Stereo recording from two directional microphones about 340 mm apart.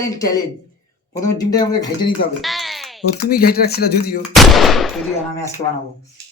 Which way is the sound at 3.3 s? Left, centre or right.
Left.